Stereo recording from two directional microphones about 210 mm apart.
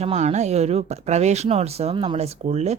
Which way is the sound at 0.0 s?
30° right (ahead or behind).